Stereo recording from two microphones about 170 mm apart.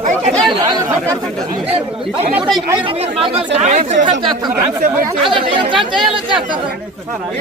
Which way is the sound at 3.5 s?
45° right (ahead or behind).